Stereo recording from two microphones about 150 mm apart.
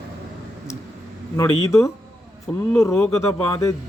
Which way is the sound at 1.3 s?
20° left (ahead or behind).